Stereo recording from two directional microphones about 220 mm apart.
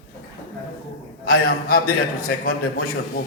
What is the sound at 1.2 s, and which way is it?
A man's voice, 40° left (ahead or behind).